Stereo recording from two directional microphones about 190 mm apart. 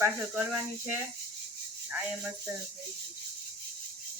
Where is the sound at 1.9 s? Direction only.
10° right (ahead or behind).